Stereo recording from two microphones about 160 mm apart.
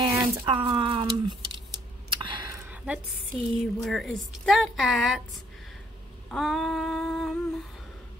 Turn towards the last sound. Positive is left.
turn(degrees=0)  # may be behind; listen again after turning